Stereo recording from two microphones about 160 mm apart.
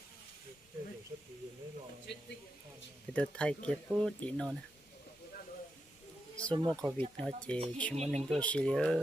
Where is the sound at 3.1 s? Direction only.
5° left (ahead or behind).